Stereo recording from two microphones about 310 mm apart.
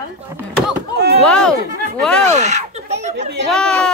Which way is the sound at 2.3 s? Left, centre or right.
Right.